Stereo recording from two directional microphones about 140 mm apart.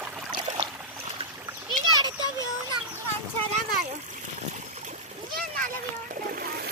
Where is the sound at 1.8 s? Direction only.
65° right (ahead or behind).